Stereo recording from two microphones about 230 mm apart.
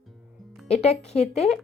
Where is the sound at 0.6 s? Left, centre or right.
Left.